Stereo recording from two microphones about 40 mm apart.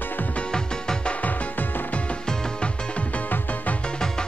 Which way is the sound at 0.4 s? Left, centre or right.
Centre.